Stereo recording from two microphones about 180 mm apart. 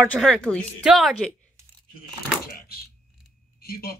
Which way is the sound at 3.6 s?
55° left (ahead or behind).